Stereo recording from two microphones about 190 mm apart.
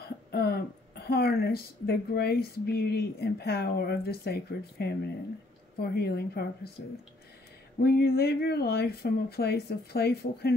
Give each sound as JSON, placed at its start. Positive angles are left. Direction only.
{"t": 0.3, "sound": "speech", "side_deg": 55}
{"t": 7.8, "sound": "speech", "side_deg": 55}